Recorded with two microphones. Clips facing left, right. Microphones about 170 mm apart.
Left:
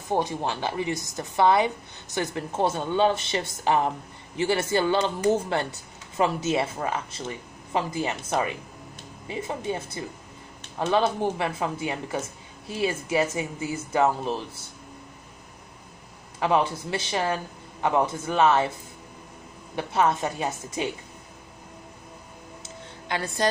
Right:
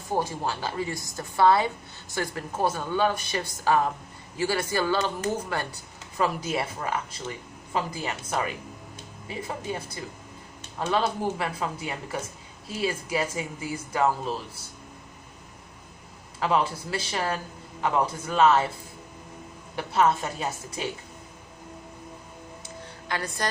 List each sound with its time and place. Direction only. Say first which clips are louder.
0.1 s a woman's voice: left 2 dB; 20° left (ahead or behind)
16.3 s a woman's voice: left 2 dB; 20° left (ahead or behind)
19.7 s a woman's voice: even; 20° left (ahead or behind)
22.6 s music: even; 25° left (ahead or behind)